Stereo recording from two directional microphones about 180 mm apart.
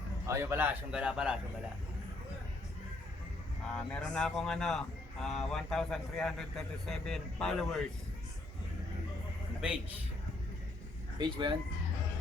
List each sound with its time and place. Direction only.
0.3 s a man's voice: 15° right (ahead or behind)
3.8 s speech: 5° left (ahead or behind)
11.2 s speech: 25° right (ahead or behind)